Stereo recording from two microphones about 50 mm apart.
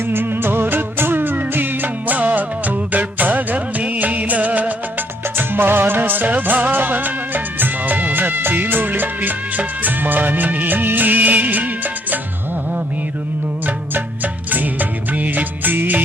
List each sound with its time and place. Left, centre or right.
0.0 s music: right
5.4 s music: right
13.7 s music: right